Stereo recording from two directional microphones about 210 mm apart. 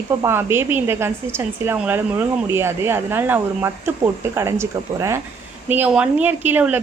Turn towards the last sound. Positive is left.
turn(degrees=-10)  # may be behind; listen again after turning